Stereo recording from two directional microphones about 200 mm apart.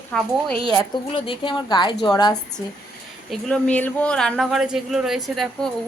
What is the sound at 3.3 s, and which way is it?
Speech, 5° left (ahead or behind).